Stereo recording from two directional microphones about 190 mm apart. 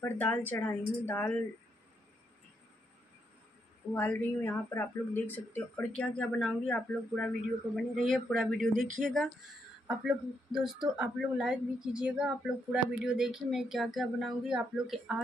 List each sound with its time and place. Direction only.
0.0 s a woman's voice: 10° left (ahead or behind)
3.9 s a woman's voice: 10° left (ahead or behind)
8.5 s speech: 40° right (ahead or behind)
9.0 s speech: centre (ahead or behind)